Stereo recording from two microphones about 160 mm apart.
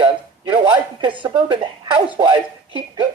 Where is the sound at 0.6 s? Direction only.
30° right (ahead or behind).